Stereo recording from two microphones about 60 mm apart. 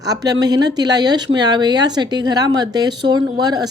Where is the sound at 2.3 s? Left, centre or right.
Right.